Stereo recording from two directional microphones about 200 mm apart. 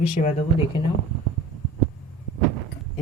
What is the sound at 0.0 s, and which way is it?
Speech, 30° left (ahead or behind).